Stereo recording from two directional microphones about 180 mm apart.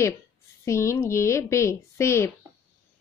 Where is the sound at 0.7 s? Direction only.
15° left (ahead or behind).